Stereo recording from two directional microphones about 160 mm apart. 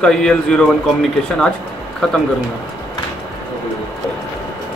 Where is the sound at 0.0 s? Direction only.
5° left (ahead or behind).